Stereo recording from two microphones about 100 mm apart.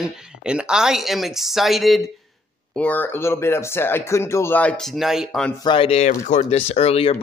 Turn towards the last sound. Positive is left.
turn(degrees=85)